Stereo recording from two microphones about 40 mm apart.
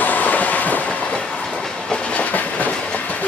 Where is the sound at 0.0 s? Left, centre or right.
Left.